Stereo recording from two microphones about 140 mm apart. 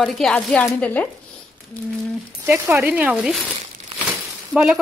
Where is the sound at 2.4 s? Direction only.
20° right (ahead or behind).